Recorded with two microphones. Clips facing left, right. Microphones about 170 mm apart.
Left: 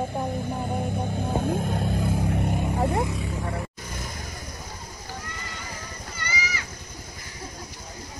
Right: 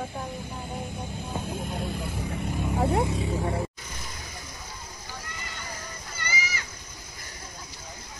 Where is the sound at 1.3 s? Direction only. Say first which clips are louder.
Left 6 dB; 55° left (ahead or behind).